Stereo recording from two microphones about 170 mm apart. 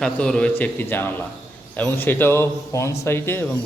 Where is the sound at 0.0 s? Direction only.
5° left (ahead or behind).